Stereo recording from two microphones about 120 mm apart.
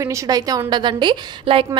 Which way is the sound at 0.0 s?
30° right (ahead or behind).